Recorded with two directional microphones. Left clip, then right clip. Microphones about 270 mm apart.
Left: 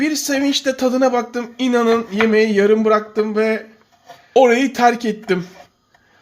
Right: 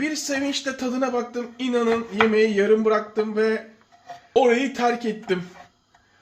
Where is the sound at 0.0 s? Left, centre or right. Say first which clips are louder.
Left 7 dB; left.